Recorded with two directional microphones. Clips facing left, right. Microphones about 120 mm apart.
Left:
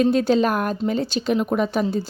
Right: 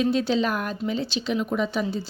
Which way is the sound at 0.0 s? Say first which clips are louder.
Left 5 dB; 45° left (ahead or behind).